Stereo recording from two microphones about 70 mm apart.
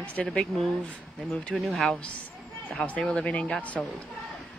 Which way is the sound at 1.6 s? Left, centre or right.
Centre.